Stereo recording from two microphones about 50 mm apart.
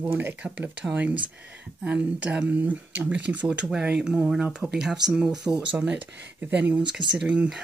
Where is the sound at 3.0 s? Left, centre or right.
Right.